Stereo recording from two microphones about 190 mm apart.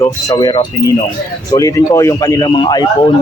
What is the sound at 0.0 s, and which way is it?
Speech, 20° left (ahead or behind).